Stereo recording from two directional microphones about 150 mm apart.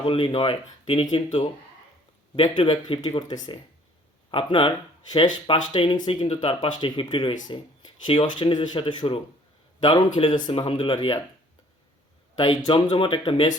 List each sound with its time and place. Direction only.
0.0 s speech: 35° left (ahead or behind)
12.4 s speech: 35° left (ahead or behind)